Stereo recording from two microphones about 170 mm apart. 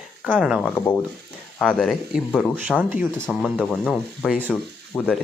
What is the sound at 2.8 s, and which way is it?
Speech, 10° right (ahead or behind).